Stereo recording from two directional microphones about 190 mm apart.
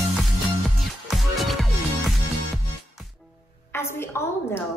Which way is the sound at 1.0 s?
Centre (ahead or behind).